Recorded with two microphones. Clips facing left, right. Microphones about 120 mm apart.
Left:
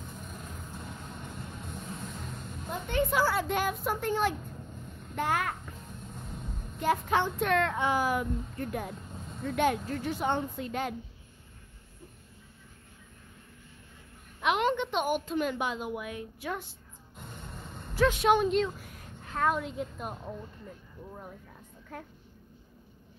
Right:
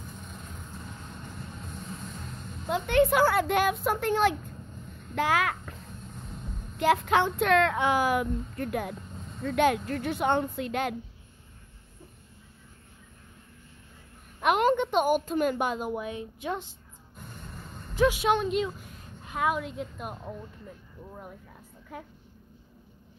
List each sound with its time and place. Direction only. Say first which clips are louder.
2.7 s a woman's voice: right 6 dB; 75° right (ahead or behind)
5.1 s a child's voice: right 4 dB; 90° right
6.8 s a woman's voice: right 4 dB; 80° right
14.4 s a woman's voice: right 4 dB; 45° right (ahead or behind)
16.0 s a woman's voice: right 3 dB; 25° right (ahead or behind)
17.9 s a woman's voice: even; 10° right (ahead or behind)
18.8 s a sound: even; 25° right (ahead or behind)
19.3 s a woman's voice: even; 5° right (ahead or behind)
21.9 s a woman's voice: right 1 dB; 5° right (ahead or behind)